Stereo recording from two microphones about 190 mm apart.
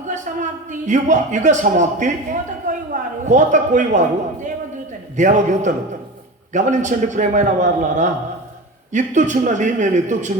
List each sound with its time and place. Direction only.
0.3 s a sound: 45° right (ahead or behind)
0.7 s a man's voice: 40° right (ahead or behind)
5.1 s a man's voice: 40° right (ahead or behind)